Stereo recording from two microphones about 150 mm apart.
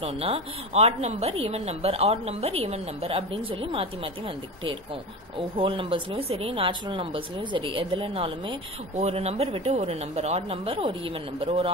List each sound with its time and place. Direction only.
0.0 s a woman's voice: 40° right (ahead or behind)
5.6 s speech: 35° right (ahead or behind)